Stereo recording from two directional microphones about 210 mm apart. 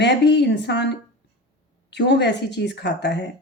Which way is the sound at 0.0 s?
55° left (ahead or behind).